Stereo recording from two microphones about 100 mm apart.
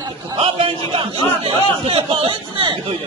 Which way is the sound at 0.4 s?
65° right (ahead or behind).